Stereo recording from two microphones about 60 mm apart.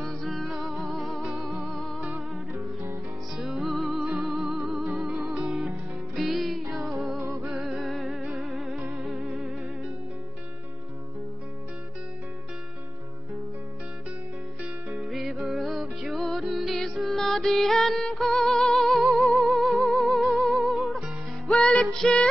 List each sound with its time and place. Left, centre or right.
0.0 s music: centre
1.7 s music: centre
2.5 s music: right
3.3 s music: centre
14.9 s music: centre
21.5 s music: centre